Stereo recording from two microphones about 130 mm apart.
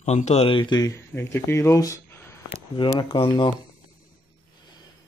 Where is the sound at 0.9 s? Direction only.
20° left (ahead or behind).